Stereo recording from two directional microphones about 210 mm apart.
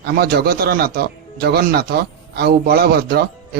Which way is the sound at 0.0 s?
50° right (ahead or behind).